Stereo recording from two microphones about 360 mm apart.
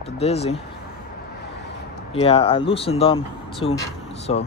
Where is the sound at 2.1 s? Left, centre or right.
Centre.